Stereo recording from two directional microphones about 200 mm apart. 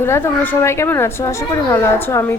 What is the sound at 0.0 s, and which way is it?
A woman's voice, 10° left (ahead or behind).